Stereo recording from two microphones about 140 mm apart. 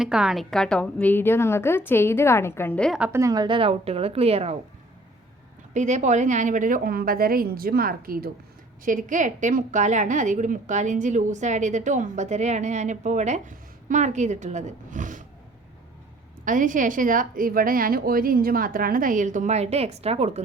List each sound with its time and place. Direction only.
0.0 s a woman's voice: 5° right (ahead or behind); by 2.9 s 10° left (ahead or behind)
3.1 s a woman's voice: 20° right (ahead or behind); by 4.5 s 45° right (ahead or behind)
5.7 s a woman's voice: 60° right (ahead or behind); by 8.3 s 90° right
8.8 s a woman's voice: 70° right (ahead or behind)
16.4 s a woman's voice: 70° right (ahead or behind); by 20.4 s 45° right (ahead or behind)